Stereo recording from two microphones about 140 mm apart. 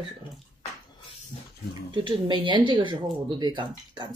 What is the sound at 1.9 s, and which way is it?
Speech, 35° right (ahead or behind).